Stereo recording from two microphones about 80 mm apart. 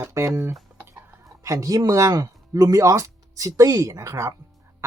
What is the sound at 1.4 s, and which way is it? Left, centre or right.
Speech, right.